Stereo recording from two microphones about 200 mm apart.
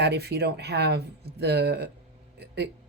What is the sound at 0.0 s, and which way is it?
Speech, 55° right (ahead or behind).